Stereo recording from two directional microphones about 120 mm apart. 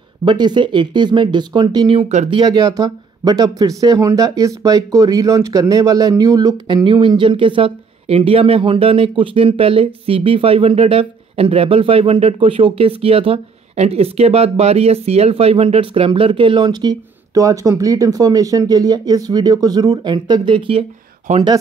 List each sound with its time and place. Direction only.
0.2 s speech: 40° right (ahead or behind)
2.5 s speech: 30° right (ahead or behind)
21.3 s speech: 75° right (ahead or behind)